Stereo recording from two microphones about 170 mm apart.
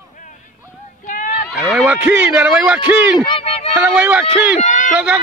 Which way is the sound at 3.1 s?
30° left (ahead or behind).